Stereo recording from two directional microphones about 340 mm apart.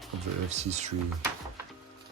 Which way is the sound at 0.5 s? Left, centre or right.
Centre.